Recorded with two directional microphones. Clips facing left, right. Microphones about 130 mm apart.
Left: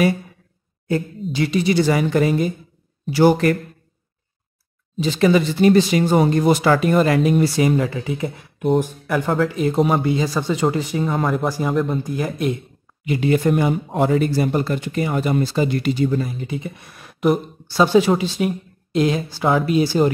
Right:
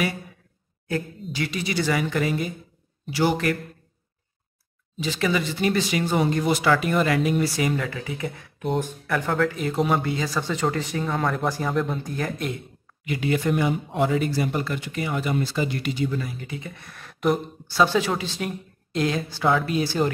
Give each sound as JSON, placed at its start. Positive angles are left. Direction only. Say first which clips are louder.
{"t": 0.8, "sound": "speech", "louder": "left 6 dB", "side_deg": 25}
{"t": 5.0, "sound": "speech", "louder": "left 8 dB", "side_deg": 35}
{"t": 9.8, "sound": "speech", "louder": "left 4 dB", "side_deg": 30}
{"t": 10.0, "sound": "speech", "louder": "left 6 dB", "side_deg": 20}
{"t": 13.0, "sound": "speech", "louder": "left 6 dB", "side_deg": 30}